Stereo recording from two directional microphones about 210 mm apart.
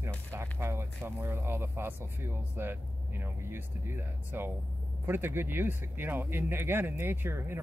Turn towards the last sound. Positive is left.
turn(degrees=-10)  # may be behind; listen again after turning